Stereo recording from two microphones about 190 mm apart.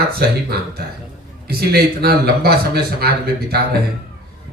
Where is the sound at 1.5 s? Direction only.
55° right (ahead or behind).